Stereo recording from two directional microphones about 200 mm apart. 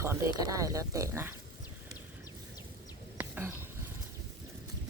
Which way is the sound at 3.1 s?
10° right (ahead or behind).